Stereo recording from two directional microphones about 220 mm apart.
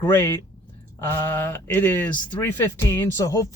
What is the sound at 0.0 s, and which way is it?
Speech, 10° left (ahead or behind).